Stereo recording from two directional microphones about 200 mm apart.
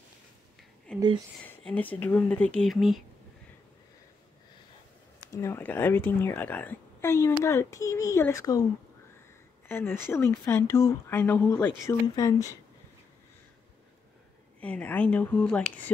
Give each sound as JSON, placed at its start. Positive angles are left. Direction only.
{"t": 0.9, "sound": "a sound", "side_deg": 5}
{"t": 1.4, "sound": "a woman's voice", "side_deg": 5}
{"t": 5.3, "sound": "a woman's voice", "side_deg": 15}
{"t": 9.7, "sound": "a woman's voice", "side_deg": 10}
{"t": 14.6, "sound": "a woman's voice", "side_deg": 5}